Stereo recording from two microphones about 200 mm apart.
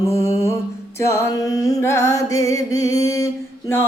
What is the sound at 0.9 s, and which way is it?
Music, 15° left (ahead or behind).